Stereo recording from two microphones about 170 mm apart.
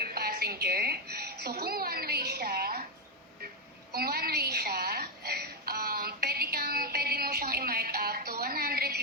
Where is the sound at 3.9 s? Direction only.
65° right (ahead or behind).